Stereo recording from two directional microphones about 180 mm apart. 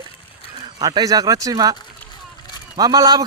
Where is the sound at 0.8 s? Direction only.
20° right (ahead or behind).